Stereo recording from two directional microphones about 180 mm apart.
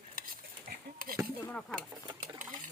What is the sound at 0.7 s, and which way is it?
A woman's voice, 55° right (ahead or behind).